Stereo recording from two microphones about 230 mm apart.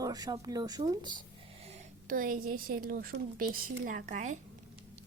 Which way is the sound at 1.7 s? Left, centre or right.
Right.